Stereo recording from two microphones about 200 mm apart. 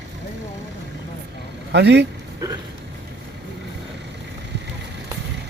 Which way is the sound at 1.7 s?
55° right (ahead or behind).